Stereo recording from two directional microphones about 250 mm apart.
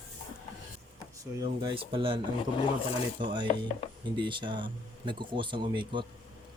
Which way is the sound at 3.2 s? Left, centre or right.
Centre.